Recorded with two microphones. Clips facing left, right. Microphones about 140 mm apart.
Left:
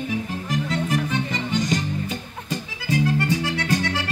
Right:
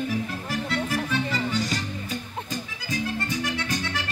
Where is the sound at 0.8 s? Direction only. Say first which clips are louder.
Left 2 dB; 20° left (ahead or behind).